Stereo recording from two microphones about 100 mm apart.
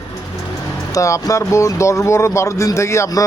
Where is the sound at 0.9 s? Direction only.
30° left (ahead or behind).